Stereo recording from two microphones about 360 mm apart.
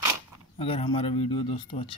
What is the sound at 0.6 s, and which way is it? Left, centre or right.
Speech, centre.